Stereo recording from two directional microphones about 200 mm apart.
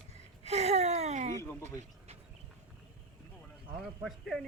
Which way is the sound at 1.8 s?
30° right (ahead or behind).